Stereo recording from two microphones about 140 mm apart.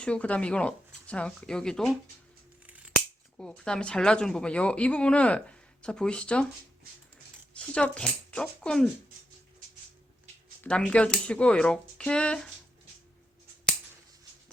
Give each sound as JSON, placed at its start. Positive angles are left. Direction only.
{"t": 0.0, "sound": "a woman's voice", "side_deg": 10}
{"t": 3.3, "sound": "a woman's voice", "side_deg": 5}
{"t": 7.5, "sound": "speech", "side_deg": 5}
{"t": 10.6, "sound": "a woman's voice", "side_deg": 5}